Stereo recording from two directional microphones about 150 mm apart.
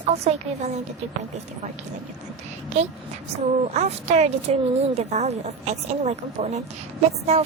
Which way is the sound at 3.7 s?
45° right (ahead or behind).